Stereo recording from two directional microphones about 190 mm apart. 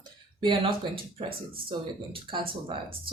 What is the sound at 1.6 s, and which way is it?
Speech, 25° right (ahead or behind).